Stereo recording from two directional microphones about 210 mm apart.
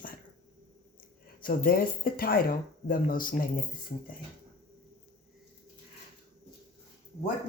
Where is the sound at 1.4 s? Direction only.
45° left (ahead or behind).